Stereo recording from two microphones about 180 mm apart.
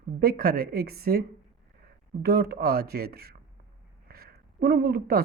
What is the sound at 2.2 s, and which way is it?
A woman's voice, 60° right (ahead or behind).